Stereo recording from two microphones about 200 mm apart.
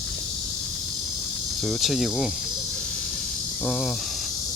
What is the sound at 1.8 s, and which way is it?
Cricket, centre (ahead or behind).